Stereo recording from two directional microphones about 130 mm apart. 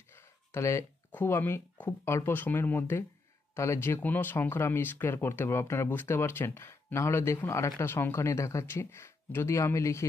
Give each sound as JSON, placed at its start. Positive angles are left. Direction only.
{"t": 0.1, "sound": "speech", "side_deg": 20}